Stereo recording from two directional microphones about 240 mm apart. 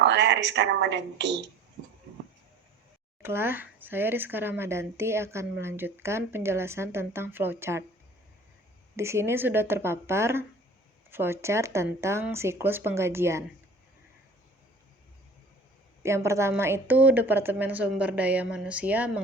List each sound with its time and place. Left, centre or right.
0.0 s a woman's voice: right
3.2 s speech: centre
9.0 s speech: centre
16.0 s speech: centre